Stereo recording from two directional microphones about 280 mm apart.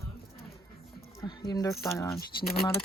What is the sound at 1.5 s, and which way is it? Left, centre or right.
Speech, centre.